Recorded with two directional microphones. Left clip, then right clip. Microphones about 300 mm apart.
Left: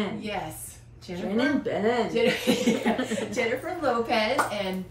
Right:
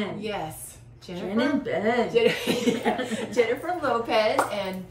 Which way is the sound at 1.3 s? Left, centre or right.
Centre.